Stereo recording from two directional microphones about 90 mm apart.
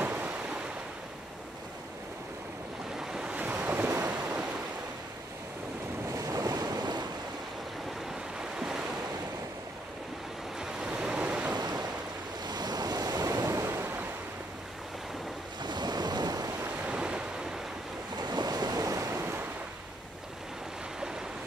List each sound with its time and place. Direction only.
0.0 s waves: 20° right (ahead or behind)
3.0 s waves: 5° right (ahead or behind)
6.1 s waves: 40° right (ahead or behind)
8.4 s waves: 10° right (ahead or behind)
10.6 s waves: 10° right (ahead or behind)
11.5 s waves: 50° right (ahead or behind); by 14.0 s 25° right (ahead or behind)
15.6 s waves: 55° right (ahead or behind)
16.6 s waves: 15° right (ahead or behind)
18.2 s waves: 50° right (ahead or behind); by 19.4 s 25° right (ahead or behind)